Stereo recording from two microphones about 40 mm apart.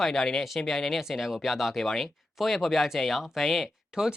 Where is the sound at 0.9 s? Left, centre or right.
Centre.